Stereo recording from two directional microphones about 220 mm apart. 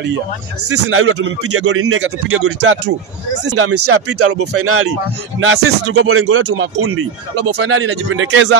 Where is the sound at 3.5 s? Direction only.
90° right.